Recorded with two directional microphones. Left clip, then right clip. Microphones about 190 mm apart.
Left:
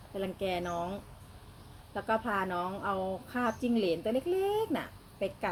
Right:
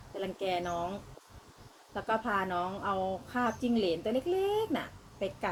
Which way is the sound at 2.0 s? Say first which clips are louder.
Even; 15° left (ahead or behind).